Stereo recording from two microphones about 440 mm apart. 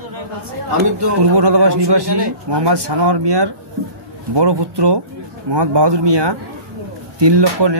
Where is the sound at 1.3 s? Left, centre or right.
Right.